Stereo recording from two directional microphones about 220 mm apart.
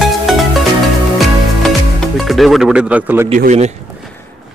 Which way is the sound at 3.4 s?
35° right (ahead or behind).